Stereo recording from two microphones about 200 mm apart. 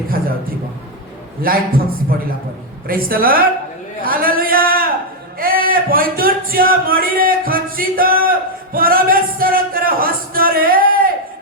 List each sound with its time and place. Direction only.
1.4 s a man's voice: 45° right (ahead or behind)
4.0 s a sound: 45° right (ahead or behind)
5.4 s speech: 45° right (ahead or behind)